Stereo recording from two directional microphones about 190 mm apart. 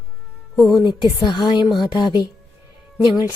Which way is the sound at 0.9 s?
25° left (ahead or behind).